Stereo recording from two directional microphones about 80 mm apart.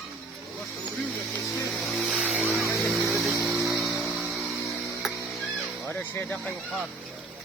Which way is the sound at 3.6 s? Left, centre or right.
Centre.